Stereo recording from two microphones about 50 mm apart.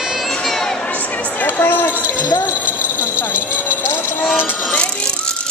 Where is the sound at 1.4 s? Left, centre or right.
Left.